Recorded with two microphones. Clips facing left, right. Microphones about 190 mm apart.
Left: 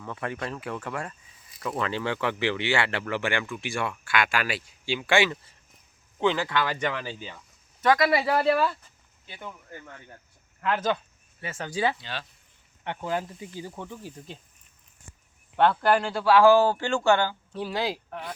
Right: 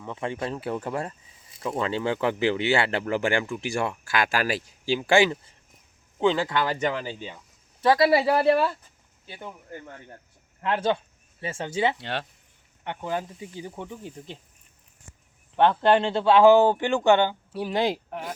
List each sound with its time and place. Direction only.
0.0 s speech: 20° right (ahead or behind)
7.0 s speech: 20° right (ahead or behind)
7.8 s speech: 30° right (ahead or behind)
9.7 s speech: 30° right (ahead or behind)
11.9 s speech: 65° right (ahead or behind)
12.8 s speech: 15° right (ahead or behind)
15.5 s speech: 15° right (ahead or behind)